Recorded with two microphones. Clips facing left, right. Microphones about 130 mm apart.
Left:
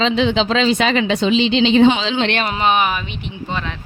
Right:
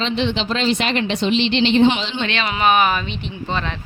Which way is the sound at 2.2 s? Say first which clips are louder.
Left 5 dB; 60° left (ahead or behind).